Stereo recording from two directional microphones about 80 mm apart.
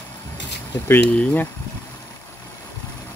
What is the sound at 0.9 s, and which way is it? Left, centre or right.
Speech, centre.